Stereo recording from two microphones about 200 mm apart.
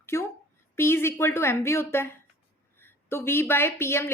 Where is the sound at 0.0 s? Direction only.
15° left (ahead or behind).